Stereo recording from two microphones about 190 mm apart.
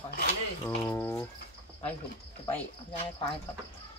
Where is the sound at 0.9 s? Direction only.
15° left (ahead or behind).